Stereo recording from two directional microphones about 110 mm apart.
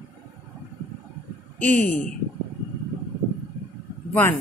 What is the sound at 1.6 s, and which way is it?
Speech, 15° left (ahead or behind).